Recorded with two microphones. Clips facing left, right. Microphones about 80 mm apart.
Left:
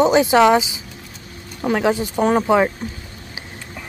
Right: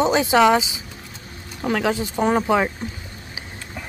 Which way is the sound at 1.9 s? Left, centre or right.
Left.